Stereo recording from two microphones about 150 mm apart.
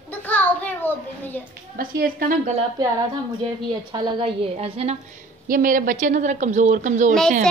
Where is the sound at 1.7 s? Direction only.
75° right (ahead or behind).